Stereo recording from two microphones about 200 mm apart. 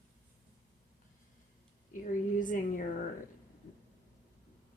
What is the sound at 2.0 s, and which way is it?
Speech, 40° left (ahead or behind).